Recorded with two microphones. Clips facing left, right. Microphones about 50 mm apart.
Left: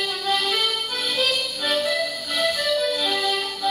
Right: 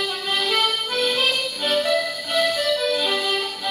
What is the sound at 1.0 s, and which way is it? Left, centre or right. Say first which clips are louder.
Music: right 3 dB; right.